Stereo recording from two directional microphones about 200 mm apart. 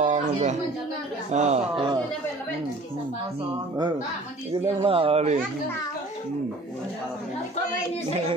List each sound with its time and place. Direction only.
0.0 s a sound: 35° right (ahead or behind)
1.3 s speech: 35° right (ahead or behind)
4.5 s speech: 25° right (ahead or behind)